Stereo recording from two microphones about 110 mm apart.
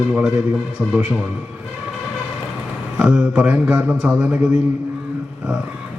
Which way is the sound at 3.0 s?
5° right (ahead or behind).